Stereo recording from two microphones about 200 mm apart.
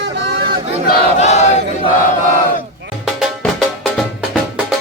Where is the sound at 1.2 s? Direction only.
35° left (ahead or behind).